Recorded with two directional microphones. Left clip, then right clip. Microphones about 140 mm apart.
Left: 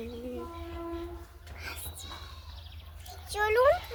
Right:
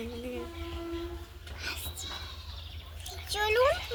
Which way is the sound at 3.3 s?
35° left (ahead or behind).